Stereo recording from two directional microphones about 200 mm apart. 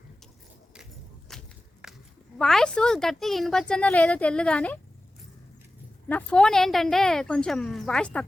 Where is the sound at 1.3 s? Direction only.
Centre (ahead or behind).